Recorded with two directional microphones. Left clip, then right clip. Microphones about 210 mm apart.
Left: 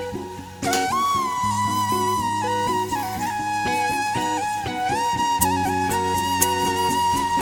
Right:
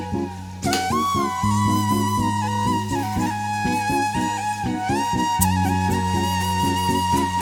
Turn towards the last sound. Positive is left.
turn(degrees=0)  # may be behind; listen again after turning